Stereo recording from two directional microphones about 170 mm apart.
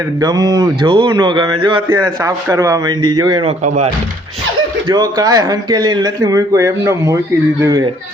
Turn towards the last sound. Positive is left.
turn(degrees=-15)  # may be behind; listen again after turning